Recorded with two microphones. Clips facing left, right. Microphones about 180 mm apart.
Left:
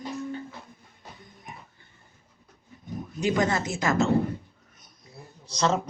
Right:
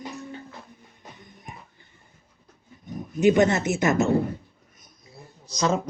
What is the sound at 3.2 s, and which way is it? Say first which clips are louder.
Speech: right 6 dB; 20° right (ahead or behind).